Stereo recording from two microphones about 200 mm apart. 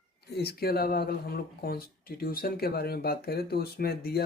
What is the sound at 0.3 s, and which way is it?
Speech, 50° left (ahead or behind).